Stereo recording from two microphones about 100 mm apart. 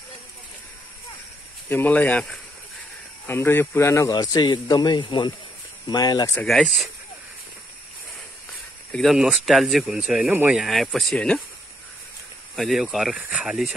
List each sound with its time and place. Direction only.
1.7 s speech: 15° left (ahead or behind)
4.1 s speech: 45° left (ahead or behind)
6.4 s speech: centre (ahead or behind)
9.0 s speech: 5° right (ahead or behind)
10.5 s speech: centre (ahead or behind)
12.5 s speech: centre (ahead or behind)